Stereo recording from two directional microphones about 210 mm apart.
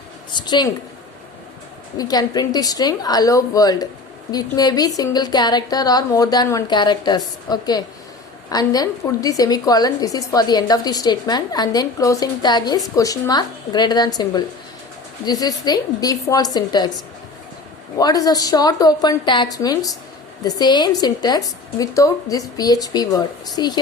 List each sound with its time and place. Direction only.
0.3 s a sound: 20° left (ahead or behind)
2.0 s a woman's voice: 20° left (ahead or behind)
17.9 s a woman's voice: 15° left (ahead or behind)